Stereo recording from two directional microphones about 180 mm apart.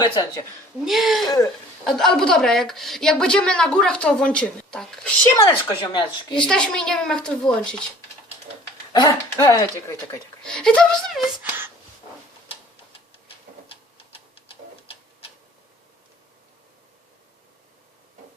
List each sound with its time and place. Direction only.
0.0 s speech: 20° left (ahead or behind)
0.9 s a woman's voice: centre (ahead or behind)
5.3 s speech: 20° left (ahead or behind)
6.4 s a woman's voice: 5° left (ahead or behind)
8.9 s speech: 20° left (ahead or behind)
10.4 s a woman's voice: 5° left (ahead or behind)
13.2 s a sound: 30° left (ahead or behind)